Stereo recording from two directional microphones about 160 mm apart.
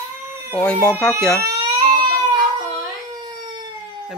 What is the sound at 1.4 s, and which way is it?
Baby cry, 25° right (ahead or behind).